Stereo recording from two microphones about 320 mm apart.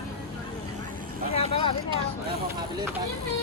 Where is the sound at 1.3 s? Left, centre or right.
Centre.